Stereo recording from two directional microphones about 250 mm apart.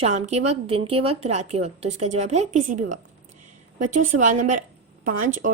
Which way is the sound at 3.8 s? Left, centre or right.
Right.